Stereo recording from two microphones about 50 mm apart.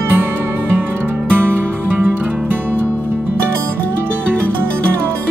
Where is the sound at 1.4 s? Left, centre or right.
Right.